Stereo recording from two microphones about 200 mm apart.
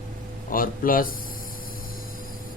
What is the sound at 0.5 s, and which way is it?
Speech, 45° left (ahead or behind).